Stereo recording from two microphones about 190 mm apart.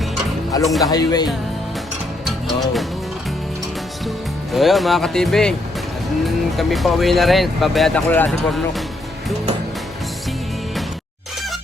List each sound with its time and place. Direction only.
0.6 s speech: centre (ahead or behind)
0.9 s speech: 20° left (ahead or behind)
2.2 s music: centre (ahead or behind)
4.5 s speech: centre (ahead or behind)